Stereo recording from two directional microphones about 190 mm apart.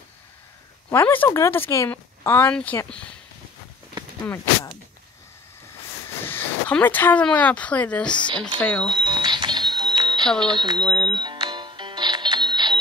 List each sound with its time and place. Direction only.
0.8 s speech: 10° left (ahead or behind)
6.2 s speech: 10° left (ahead or behind)
8.8 s speech: 25° right (ahead or behind)
9.8 s music: 25° right (ahead or behind)
10.4 s speech: 25° right (ahead or behind)
10.8 s speech: 5° left (ahead or behind)
11.1 s music: 25° right (ahead or behind)